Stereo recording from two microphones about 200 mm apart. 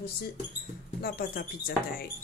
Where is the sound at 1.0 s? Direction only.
50° left (ahead or behind).